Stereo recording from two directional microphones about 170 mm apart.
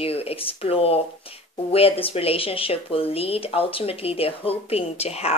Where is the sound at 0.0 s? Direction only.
35° left (ahead or behind).